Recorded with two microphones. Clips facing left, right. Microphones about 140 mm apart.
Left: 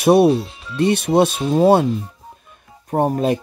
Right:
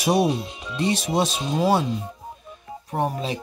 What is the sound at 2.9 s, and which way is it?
Speech, 50° left (ahead or behind).